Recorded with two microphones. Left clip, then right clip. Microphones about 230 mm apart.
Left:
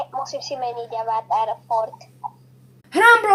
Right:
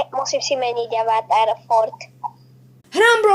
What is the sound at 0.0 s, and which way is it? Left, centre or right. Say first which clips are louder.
A woman's voice: right 6 dB; right.